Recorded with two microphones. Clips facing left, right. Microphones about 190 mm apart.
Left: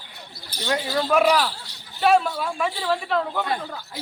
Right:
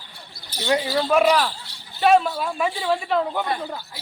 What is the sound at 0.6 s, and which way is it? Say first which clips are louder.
A man's voice: right 3 dB; 5° right (ahead or behind).